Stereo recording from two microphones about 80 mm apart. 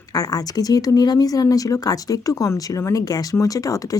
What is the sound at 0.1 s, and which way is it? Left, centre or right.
Speech, left.